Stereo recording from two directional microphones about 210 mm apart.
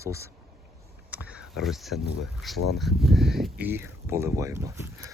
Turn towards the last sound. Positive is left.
turn(degrees=-15)  # may be behind; listen again after turning